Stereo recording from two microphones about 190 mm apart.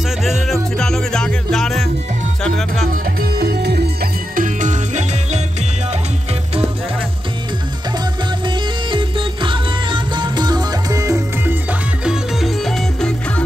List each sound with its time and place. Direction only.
0.2 s music: centre (ahead or behind)
2.9 s music: 55° right (ahead or behind)
8.5 s music: 25° right (ahead or behind)
12.0 s music: centre (ahead or behind)